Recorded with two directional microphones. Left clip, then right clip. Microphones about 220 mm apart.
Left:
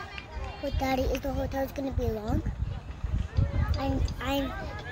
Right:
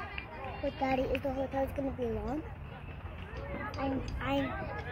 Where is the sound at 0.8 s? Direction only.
50° left (ahead or behind).